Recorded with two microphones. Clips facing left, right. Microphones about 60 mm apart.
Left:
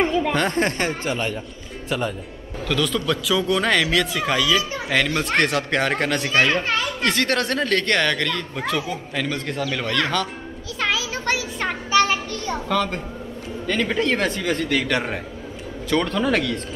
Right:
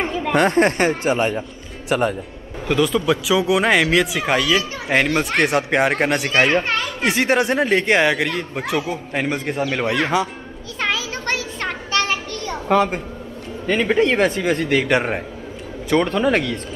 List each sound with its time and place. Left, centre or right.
0.0 s chatter: centre
0.5 s speech: right
1.9 s speech: right
2.7 s speech: centre
4.9 s speech: right
5.2 s speech: centre
6.2 s speech: right
9.2 s speech: right
10.9 s a sound: centre
12.6 s a woman's voice: right